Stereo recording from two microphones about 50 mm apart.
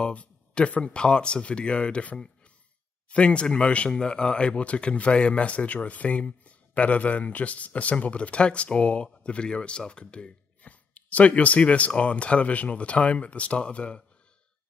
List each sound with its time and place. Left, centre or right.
0.0 s speech: left